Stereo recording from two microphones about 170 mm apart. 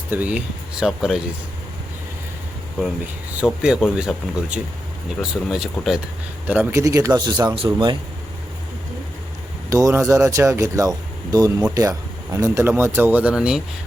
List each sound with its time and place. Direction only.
0.1 s speech: 10° right (ahead or behind)
3.3 s speech: 5° right (ahead or behind)
6.5 s a man's voice: 15° right (ahead or behind); by 7.9 s 30° right (ahead or behind)
9.6 s speech: 20° right (ahead or behind); by 13.6 s 5° right (ahead or behind)